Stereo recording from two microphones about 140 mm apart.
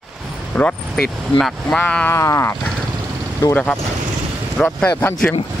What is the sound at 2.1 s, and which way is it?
Speech, 20° left (ahead or behind).